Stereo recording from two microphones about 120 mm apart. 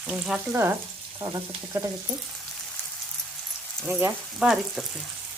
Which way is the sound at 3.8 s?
15° right (ahead or behind).